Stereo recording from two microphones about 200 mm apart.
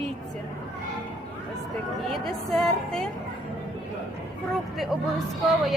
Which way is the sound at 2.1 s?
Centre (ahead or behind).